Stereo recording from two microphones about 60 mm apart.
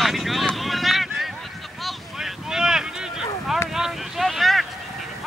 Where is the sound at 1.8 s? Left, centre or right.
Centre.